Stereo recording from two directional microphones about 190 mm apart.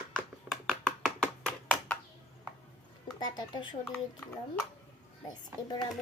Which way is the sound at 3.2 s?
20° left (ahead or behind).